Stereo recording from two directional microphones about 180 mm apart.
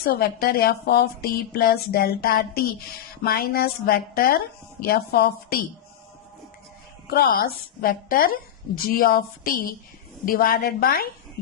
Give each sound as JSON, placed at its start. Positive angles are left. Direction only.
{"t": 0.0, "sound": "a woman's voice", "side_deg": 60}
{"t": 7.1, "sound": "a woman's voice", "side_deg": 55}